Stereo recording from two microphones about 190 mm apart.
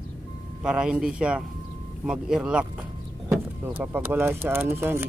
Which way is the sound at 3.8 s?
10° right (ahead or behind).